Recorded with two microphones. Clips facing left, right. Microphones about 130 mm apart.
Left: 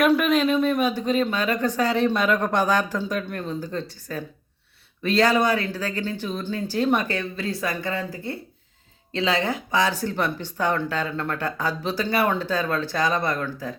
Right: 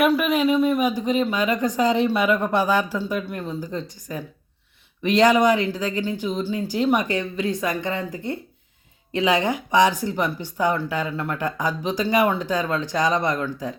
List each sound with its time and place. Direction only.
0.0 s speech: 5° right (ahead or behind)